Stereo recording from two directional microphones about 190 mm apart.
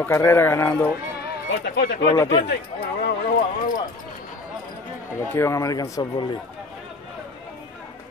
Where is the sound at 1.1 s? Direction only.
55° left (ahead or behind).